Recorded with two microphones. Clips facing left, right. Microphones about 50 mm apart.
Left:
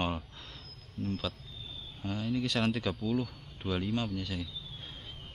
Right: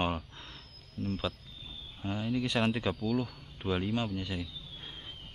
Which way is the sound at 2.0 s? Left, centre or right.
Centre.